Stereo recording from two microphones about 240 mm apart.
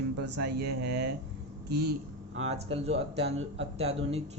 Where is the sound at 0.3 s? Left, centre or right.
Right.